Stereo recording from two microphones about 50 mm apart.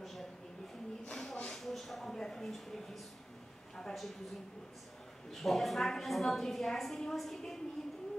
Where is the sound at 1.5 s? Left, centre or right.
Centre.